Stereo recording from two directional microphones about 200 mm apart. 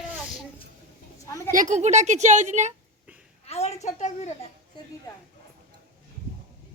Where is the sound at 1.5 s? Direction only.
40° right (ahead or behind).